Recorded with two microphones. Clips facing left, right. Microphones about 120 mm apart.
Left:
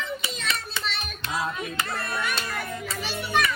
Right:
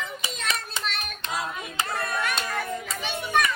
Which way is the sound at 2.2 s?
Centre (ahead or behind).